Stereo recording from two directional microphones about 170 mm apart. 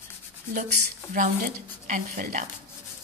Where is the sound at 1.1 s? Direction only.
50° right (ahead or behind).